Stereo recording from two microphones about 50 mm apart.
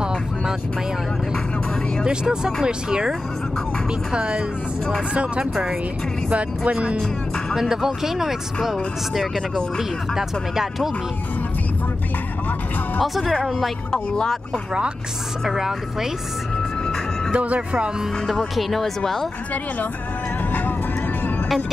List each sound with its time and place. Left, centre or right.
2.0 s speech: centre
4.1 s speech: centre
7.5 s speech: centre
9.8 s speech: centre
13.0 s speech: centre
15.4 s speech: centre
17.3 s speech: right
18.6 s speech: centre